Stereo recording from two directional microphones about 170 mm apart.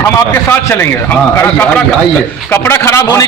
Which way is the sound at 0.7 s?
15° left (ahead or behind).